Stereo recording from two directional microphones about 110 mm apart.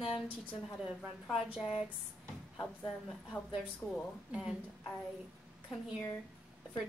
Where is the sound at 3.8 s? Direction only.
15° left (ahead or behind).